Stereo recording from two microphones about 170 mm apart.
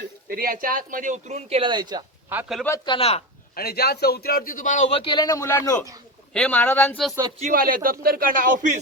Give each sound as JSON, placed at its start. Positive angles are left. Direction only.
{"t": 0.3, "sound": "speech", "side_deg": -60}
{"t": 2.3, "sound": "speech", "side_deg": -10}
{"t": 2.6, "sound": "speech", "side_deg": 20}
{"t": 3.5, "sound": "a man's voice", "side_deg": 65}
{"t": 7.5, "sound": "speech", "side_deg": -55}